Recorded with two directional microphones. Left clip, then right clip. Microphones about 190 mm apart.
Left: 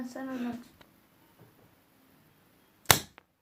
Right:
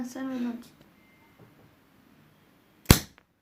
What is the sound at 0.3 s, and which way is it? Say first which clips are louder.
Speech: right 3 dB; 25° left (ahead or behind).